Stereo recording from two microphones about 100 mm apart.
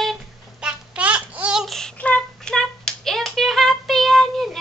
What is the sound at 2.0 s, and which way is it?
Hands, 10° left (ahead or behind).